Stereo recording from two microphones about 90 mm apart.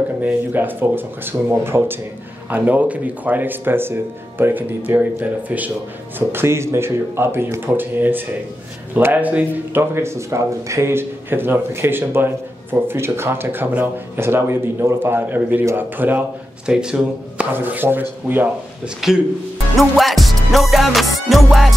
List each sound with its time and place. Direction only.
0.2 s speech: 20° right (ahead or behind)
16.6 s speech: 10° right (ahead or behind)
17.5 s speech: 25° right (ahead or behind)
18.9 s a man's voice: 5° right (ahead or behind)
19.8 s music: centre (ahead or behind)